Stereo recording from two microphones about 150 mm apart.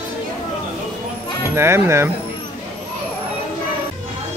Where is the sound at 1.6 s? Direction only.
15° right (ahead or behind).